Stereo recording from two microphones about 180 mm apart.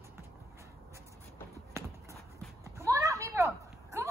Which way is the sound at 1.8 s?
15° right (ahead or behind).